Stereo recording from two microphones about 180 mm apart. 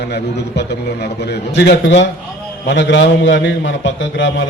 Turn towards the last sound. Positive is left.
turn(degrees=90)